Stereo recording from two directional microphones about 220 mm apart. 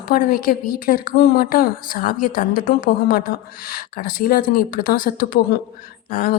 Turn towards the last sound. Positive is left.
turn(degrees=40)  # may be behind; listen again after turning